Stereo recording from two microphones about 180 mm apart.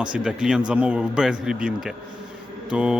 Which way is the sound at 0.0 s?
5° right (ahead or behind).